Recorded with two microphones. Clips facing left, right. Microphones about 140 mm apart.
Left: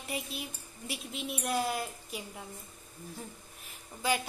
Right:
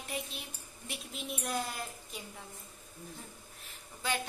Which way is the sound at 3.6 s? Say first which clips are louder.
Left 5 dB; 10° left (ahead or behind).